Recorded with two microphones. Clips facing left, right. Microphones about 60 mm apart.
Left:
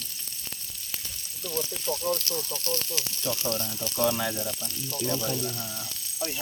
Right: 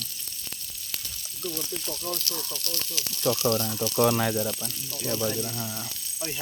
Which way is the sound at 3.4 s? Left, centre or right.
Right.